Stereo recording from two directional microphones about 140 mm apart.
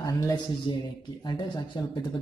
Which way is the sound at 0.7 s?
35° left (ahead or behind).